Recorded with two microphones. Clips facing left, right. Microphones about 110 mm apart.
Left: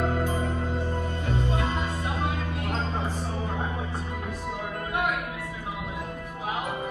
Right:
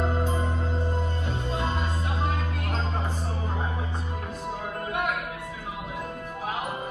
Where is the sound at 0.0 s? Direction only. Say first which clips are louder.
Left 1 dB; 25° right (ahead or behind).